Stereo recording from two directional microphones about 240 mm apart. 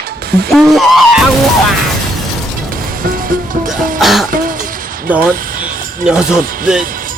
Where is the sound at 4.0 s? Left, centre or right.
Centre.